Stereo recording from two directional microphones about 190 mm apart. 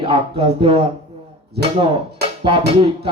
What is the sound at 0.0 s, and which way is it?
Music, 30° right (ahead or behind).